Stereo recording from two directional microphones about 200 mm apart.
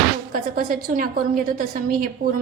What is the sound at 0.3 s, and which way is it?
A woman's voice, 50° right (ahead or behind).